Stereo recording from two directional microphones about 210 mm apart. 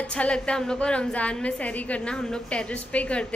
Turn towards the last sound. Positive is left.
turn(degrees=5)  # may be behind; listen again after turning